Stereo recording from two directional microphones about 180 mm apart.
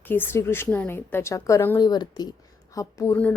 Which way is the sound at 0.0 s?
10° left (ahead or behind).